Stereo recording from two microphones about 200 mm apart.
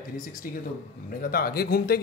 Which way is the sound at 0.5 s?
45° left (ahead or behind).